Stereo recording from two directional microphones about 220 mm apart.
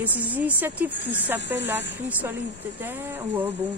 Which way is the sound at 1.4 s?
50° left (ahead or behind).